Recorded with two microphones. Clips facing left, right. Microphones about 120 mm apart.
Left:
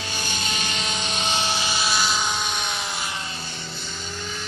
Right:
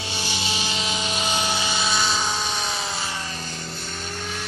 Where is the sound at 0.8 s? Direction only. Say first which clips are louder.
Right 1 dB; 30° left (ahead or behind).